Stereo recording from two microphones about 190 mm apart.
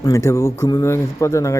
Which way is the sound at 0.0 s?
15° left (ahead or behind).